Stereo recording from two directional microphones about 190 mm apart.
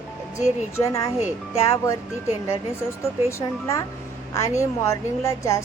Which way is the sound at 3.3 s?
15° left (ahead or behind).